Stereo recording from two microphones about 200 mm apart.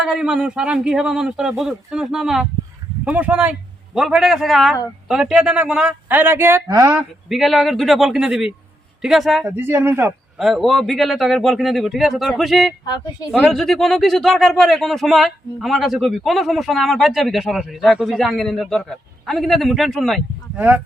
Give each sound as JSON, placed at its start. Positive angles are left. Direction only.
{"t": 0.0, "sound": "a man's voice", "side_deg": -5}
{"t": 7.3, "sound": "speech", "side_deg": 0}
{"t": 12.8, "sound": "speech", "side_deg": 20}
{"t": 13.3, "sound": "a man's voice", "side_deg": 0}